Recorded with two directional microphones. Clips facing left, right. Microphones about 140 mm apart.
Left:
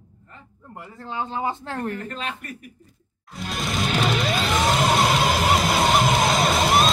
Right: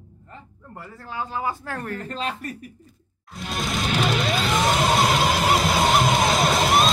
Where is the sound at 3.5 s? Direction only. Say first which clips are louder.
Even; centre (ahead or behind).